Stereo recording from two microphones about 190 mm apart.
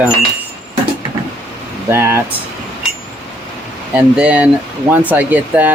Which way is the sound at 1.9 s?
10° right (ahead or behind).